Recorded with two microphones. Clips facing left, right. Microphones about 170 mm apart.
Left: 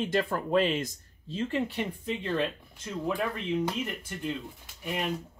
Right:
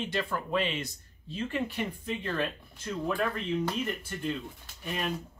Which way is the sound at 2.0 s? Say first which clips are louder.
Left 4 dB; 20° left (ahead or behind).